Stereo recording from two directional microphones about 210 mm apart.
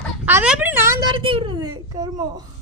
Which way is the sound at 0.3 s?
5° right (ahead or behind).